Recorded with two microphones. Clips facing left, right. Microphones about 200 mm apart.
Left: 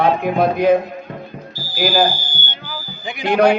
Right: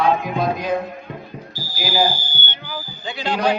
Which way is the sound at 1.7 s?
60° left (ahead or behind).